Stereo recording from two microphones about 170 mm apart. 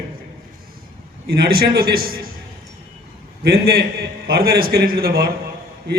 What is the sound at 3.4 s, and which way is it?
A man's voice, 65° right (ahead or behind).